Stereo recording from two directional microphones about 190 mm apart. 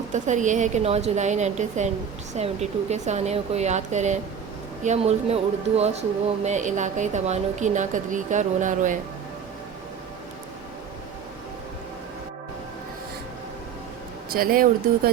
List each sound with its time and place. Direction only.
0.1 s speech: 40° right (ahead or behind)
14.3 s speech: 50° right (ahead or behind)